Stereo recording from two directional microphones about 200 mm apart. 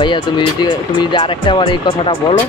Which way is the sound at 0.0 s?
20° left (ahead or behind).